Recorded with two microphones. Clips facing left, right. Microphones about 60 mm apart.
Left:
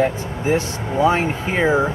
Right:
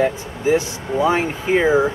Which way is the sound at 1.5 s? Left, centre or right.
Centre.